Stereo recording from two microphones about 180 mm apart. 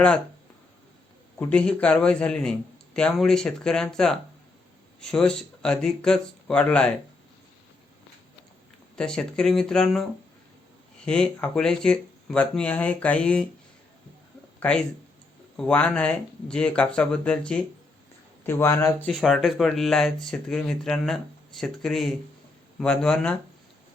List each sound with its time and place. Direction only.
1.4 s speech: 5° left (ahead or behind)
9.0 s speech: 5° left (ahead or behind)
14.6 s speech: 5° left (ahead or behind)
19.0 s speech: centre (ahead or behind)